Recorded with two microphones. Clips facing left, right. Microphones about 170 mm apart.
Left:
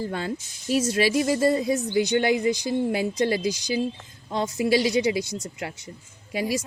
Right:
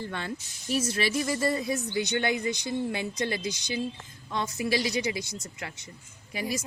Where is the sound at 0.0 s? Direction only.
40° left (ahead or behind).